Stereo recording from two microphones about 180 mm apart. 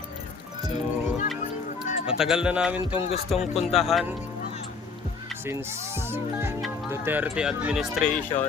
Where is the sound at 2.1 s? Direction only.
5° right (ahead or behind).